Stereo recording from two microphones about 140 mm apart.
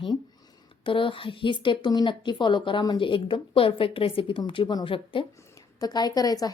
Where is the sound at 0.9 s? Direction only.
35° left (ahead or behind).